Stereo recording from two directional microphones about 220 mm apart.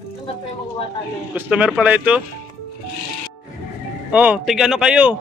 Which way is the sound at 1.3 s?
5° right (ahead or behind).